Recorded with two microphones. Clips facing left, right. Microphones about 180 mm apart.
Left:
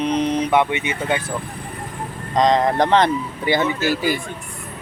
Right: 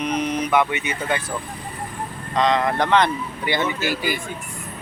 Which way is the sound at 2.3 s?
40° left (ahead or behind).